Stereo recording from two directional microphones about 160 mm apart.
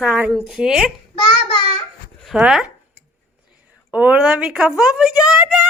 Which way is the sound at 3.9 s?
10° right (ahead or behind).